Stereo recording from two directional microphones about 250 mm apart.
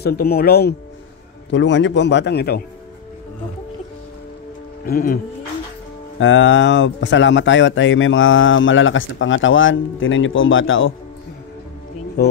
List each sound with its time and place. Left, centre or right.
0.0 s speech: left
4.8 s speech: left
6.1 s speech: left